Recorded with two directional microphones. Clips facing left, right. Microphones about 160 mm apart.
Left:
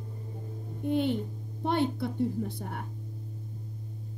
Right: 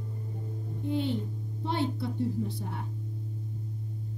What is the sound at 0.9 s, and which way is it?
A child's voice, 55° left (ahead or behind).